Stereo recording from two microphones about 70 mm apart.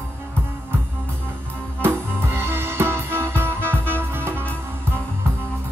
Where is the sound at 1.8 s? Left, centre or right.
Right.